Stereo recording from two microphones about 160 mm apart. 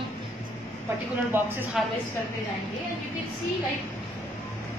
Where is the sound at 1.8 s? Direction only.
Centre (ahead or behind).